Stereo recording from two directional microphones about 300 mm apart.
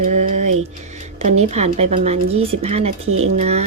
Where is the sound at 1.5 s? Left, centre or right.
Right.